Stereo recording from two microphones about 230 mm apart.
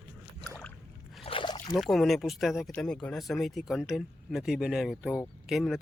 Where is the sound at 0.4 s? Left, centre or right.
Centre.